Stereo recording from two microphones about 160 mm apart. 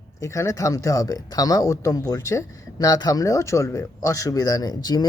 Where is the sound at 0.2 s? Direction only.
20° left (ahead or behind).